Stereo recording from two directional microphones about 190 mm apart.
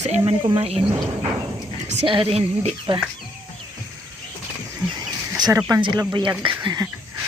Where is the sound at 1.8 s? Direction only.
25° right (ahead or behind).